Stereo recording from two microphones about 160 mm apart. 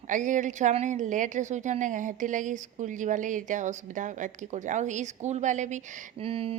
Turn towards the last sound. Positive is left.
turn(degrees=-35)  # may be behind; listen again after turning